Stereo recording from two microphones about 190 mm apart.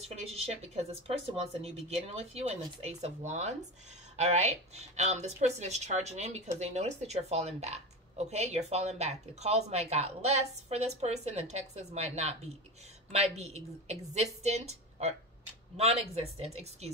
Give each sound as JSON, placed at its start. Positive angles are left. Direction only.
{"t": 0.6, "sound": "a woman's voice", "side_deg": -35}